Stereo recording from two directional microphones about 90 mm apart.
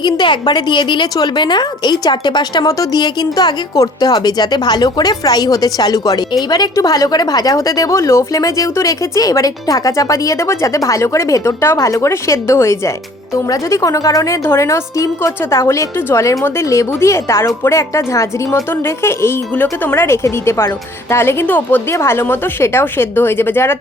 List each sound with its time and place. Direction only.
0.0 s speech: 55° left (ahead or behind)
2.6 s speech: 40° left (ahead or behind)
3.0 s a woman's voice: 50° left (ahead or behind); by 23.7 s 25° left (ahead or behind)